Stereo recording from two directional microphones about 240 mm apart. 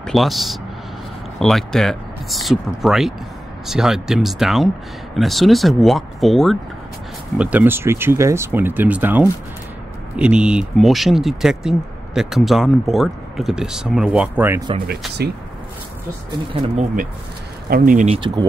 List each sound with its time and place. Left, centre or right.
0.0 s speech: centre
14.9 s speech: right
16.6 s speech: right